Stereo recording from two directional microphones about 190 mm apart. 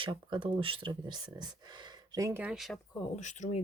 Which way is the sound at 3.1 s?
40° left (ahead or behind).